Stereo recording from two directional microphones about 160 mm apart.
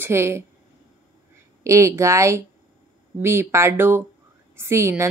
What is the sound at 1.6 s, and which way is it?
A woman's voice, 20° right (ahead or behind).